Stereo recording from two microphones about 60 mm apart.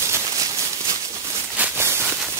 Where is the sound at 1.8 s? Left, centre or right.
Right.